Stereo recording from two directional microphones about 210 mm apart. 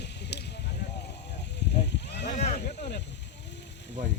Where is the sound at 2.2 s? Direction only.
35° left (ahead or behind).